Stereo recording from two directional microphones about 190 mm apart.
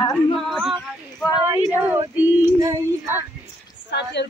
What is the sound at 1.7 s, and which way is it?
Female singing, 10° right (ahead or behind).